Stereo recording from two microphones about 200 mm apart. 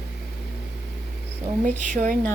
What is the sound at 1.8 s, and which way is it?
Speech, 40° right (ahead or behind).